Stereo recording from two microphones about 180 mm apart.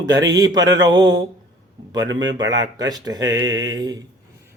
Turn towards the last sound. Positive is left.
turn(degrees=-20)  # may be behind; listen again after turning